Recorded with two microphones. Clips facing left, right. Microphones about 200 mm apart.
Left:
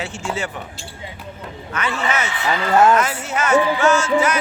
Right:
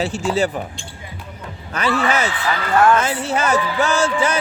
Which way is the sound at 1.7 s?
35° right (ahead or behind).